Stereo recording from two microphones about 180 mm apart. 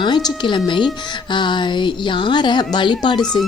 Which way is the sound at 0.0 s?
25° left (ahead or behind).